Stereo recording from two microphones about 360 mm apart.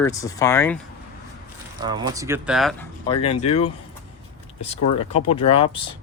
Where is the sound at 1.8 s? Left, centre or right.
Centre.